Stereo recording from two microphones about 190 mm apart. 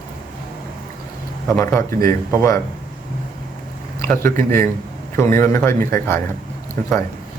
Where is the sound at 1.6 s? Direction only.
15° left (ahead or behind).